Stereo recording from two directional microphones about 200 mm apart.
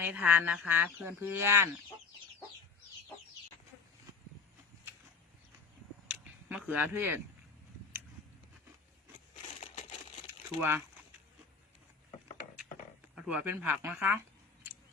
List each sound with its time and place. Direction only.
0.0 s speech: 10° right (ahead or behind)
6.5 s speech: 5° right (ahead or behind)
9.3 s a sound: 40° left (ahead or behind)
10.6 s speech: 10° right (ahead or behind)
13.1 s speech: 5° right (ahead or behind)